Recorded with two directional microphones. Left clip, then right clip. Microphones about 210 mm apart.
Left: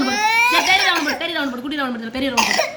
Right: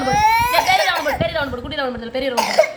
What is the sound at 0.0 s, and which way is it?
Baby cry, 20° right (ahead or behind).